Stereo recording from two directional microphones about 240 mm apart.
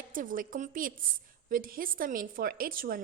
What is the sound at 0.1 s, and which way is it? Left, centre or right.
A woman's voice, right.